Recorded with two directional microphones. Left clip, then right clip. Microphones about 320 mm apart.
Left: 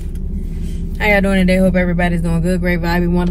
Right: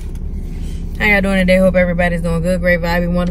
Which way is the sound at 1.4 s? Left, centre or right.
Centre.